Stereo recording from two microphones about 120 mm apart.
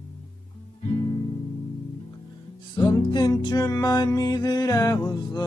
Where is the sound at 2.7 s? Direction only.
35° left (ahead or behind).